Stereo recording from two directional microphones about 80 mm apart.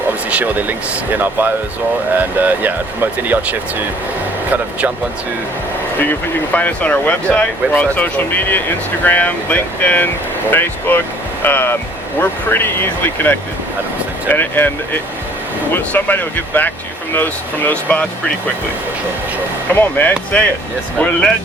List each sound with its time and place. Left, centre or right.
0.3 s speech: centre
6.0 s speech: left
19.7 s speech: left